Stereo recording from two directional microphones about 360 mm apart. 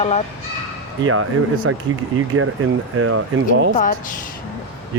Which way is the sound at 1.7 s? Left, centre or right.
Right.